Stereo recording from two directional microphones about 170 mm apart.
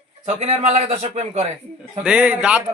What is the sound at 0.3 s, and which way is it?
A man's voice, 40° right (ahead or behind).